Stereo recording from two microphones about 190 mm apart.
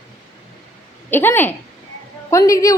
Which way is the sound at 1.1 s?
10° left (ahead or behind).